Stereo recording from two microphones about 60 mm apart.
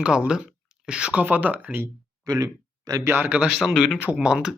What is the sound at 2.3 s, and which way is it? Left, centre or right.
Speech, right.